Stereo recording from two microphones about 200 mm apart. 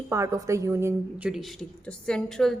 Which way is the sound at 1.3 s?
Centre (ahead or behind).